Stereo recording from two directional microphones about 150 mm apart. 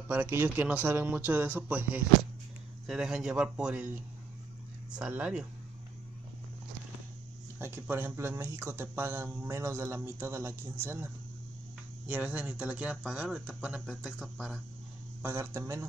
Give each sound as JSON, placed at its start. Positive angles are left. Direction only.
{"t": 0.1, "sound": "speech", "side_deg": -15}
{"t": 7.5, "sound": "speech", "side_deg": -15}
{"t": 12.1, "sound": "speech", "side_deg": -10}
{"t": 15.2, "sound": "speech", "side_deg": -20}